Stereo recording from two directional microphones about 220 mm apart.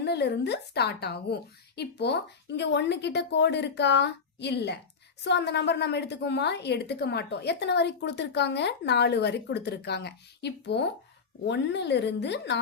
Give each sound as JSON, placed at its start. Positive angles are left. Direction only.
{"t": 0.0, "sound": "a woman's voice", "side_deg": 50}